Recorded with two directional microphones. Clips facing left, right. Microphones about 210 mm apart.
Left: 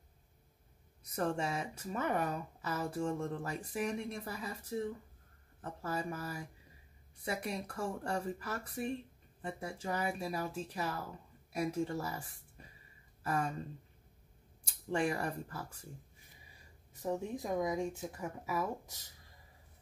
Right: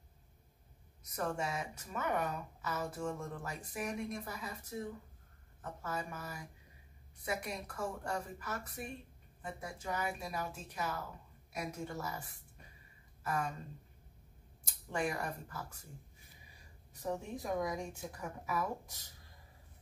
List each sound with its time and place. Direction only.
1.1 s speech: 30° left (ahead or behind)
14.9 s speech: 30° left (ahead or behind)
17.0 s speech: 20° left (ahead or behind)